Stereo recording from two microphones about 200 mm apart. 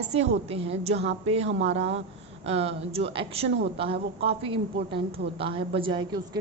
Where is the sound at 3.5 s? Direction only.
65° right (ahead or behind).